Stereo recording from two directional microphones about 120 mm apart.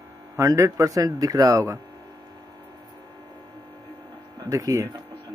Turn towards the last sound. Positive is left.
turn(degrees=-30)  # may be behind; listen again after turning